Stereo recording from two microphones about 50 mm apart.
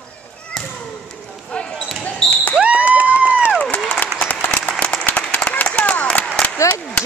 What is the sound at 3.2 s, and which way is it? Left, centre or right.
Run, right.